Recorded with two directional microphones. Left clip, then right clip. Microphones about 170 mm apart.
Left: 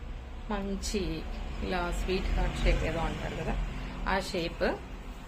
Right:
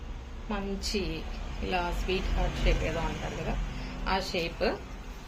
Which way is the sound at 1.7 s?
30° left (ahead or behind).